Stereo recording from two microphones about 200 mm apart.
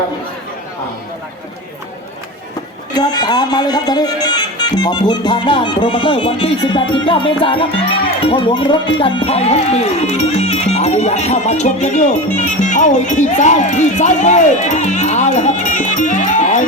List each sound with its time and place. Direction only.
2.9 s speech: 20° left (ahead or behind); by 16.6 s 35° left (ahead or behind)